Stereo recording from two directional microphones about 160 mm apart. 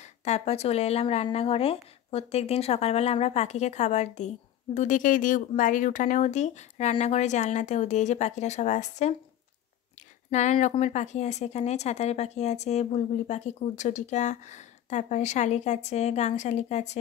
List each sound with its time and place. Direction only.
0.0 s speech: 45° left (ahead or behind)
10.3 s speech: 45° left (ahead or behind)